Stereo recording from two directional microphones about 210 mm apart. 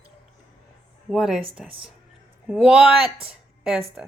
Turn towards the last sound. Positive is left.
turn(degrees=-5)  # may be behind; listen again after turning